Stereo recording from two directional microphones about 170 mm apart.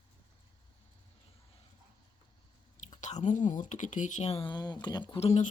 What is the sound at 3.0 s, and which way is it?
Speech, 45° left (ahead or behind).